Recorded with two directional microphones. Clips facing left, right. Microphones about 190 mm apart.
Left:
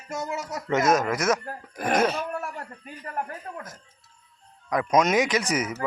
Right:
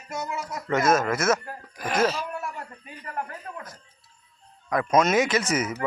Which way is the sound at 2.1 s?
60° left (ahead or behind).